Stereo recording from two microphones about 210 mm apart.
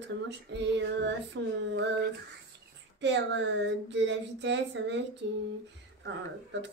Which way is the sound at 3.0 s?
55° right (ahead or behind).